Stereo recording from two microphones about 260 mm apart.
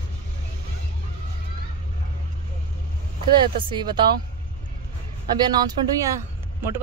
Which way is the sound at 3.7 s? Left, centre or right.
Centre.